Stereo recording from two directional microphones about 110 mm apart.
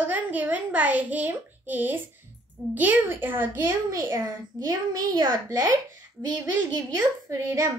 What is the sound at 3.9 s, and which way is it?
A child's voice, 35° right (ahead or behind).